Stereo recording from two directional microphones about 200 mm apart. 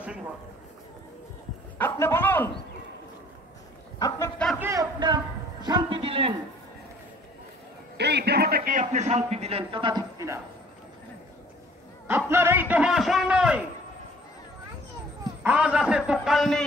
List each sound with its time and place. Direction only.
1.8 s a man's voice: 10° left (ahead or behind)
4.6 s a man's voice: 15° right (ahead or behind)
8.0 s a man's voice: 55° right (ahead or behind); by 10.4 s 15° right (ahead or behind)
12.1 s a man's voice: 10° right (ahead or behind)
15.4 s a man's voice: 5° right (ahead or behind)